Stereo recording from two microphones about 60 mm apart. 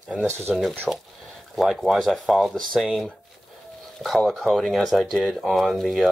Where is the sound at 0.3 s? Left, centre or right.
Right.